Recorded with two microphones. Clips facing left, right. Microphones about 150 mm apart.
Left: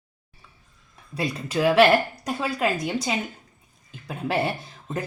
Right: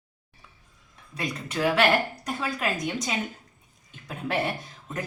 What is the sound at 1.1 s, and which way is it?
A woman's voice, 30° left (ahead or behind).